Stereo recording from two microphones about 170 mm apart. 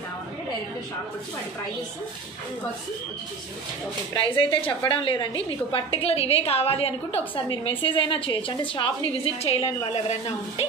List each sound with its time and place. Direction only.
4.1 s a woman's voice: 30° left (ahead or behind)